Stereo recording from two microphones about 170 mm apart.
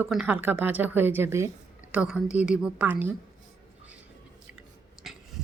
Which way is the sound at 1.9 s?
5° right (ahead or behind).